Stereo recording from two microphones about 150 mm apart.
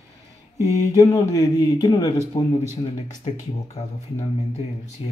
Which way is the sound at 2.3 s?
35° left (ahead or behind).